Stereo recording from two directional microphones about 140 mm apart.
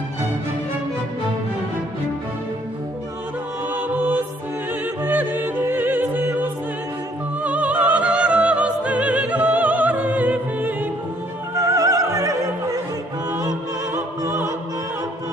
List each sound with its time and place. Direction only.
3.7 s music: 10° right (ahead or behind)
7.4 s opera: 10° right (ahead or behind)
11.6 s music: 25° right (ahead or behind)
13.9 s opera: 20° right (ahead or behind)